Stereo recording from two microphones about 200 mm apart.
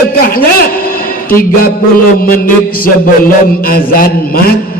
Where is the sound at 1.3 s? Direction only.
45° left (ahead or behind).